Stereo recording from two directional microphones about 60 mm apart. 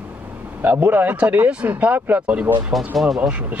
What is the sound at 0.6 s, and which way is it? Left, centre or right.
Speech, right.